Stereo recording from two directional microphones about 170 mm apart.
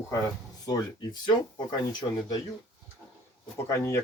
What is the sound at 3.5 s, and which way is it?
Speech, 15° left (ahead or behind).